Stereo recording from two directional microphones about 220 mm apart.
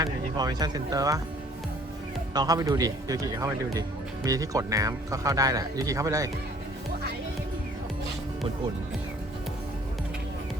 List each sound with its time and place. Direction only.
0.0 s speech: 20° right (ahead or behind)
2.3 s speech: 15° right (ahead or behind)